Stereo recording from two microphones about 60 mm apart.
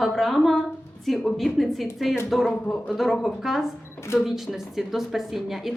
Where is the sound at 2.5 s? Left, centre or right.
Left.